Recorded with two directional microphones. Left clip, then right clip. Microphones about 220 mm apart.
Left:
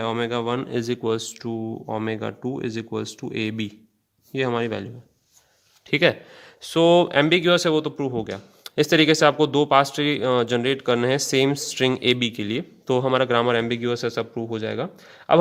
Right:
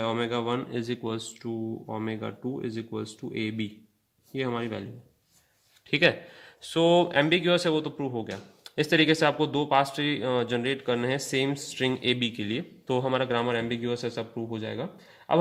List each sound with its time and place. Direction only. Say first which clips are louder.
0.0 s speech: left 4 dB; 45° left (ahead or behind)
5.9 s speech: left 4 dB; 25° left (ahead or behind)